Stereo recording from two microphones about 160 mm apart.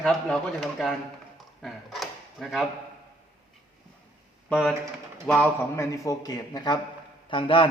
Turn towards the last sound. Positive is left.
turn(degrees=35)  # may be behind; listen again after turning